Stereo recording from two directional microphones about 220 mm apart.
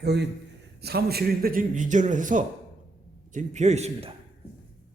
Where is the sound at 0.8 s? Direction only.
45° right (ahead or behind); by 4.1 s 30° right (ahead or behind).